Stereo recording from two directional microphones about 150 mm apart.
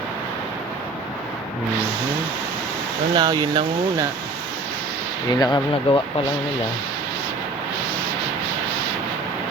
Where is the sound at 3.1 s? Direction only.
25° right (ahead or behind).